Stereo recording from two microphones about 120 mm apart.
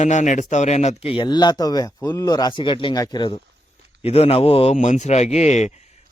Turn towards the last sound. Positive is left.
turn(degrees=65)  # may be behind; listen again after turning